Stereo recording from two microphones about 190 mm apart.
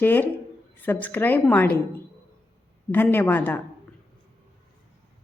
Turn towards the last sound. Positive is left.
turn(degrees=10)  # may be behind; listen again after turning